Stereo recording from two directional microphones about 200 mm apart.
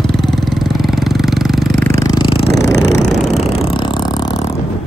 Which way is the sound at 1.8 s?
15° left (ahead or behind).